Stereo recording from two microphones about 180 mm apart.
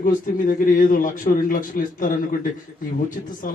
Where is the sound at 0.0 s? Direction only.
50° left (ahead or behind).